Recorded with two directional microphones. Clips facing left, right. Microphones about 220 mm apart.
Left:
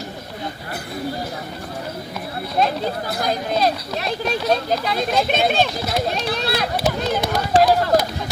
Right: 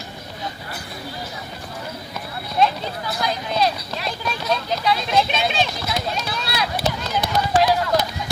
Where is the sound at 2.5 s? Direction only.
50° left (ahead or behind).